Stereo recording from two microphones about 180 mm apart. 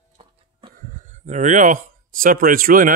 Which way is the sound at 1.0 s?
40° right (ahead or behind).